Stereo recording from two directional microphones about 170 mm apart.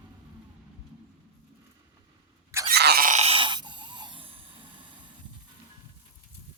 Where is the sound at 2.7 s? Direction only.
70° right (ahead or behind).